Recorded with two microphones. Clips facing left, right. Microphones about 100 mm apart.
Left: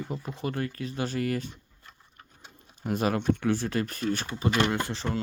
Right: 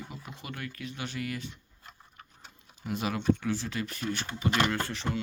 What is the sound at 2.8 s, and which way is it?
Speech, 45° left (ahead or behind).